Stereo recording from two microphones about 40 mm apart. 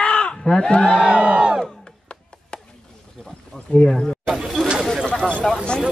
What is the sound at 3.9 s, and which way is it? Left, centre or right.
Speech, centre.